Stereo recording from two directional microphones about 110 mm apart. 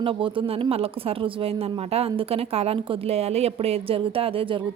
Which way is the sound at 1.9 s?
65° right (ahead or behind).